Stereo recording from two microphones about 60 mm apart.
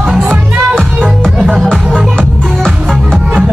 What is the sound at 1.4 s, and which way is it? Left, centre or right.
Music, right.